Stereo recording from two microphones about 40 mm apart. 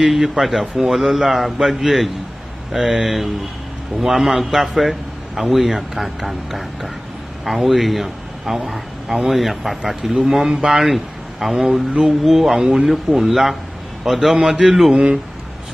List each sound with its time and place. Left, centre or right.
0.0 s a man's voice: centre
14.3 s speech: centre